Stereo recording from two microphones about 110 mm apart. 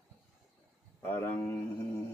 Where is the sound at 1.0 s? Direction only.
20° left (ahead or behind).